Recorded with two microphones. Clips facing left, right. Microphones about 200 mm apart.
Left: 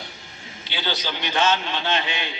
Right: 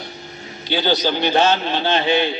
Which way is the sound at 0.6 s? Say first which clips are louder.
Right 10 dB; 40° right (ahead or behind).